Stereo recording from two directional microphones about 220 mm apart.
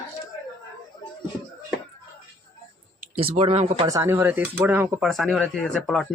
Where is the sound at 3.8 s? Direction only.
15° right (ahead or behind).